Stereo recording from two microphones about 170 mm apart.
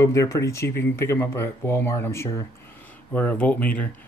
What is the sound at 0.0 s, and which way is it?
Speech, 15° left (ahead or behind).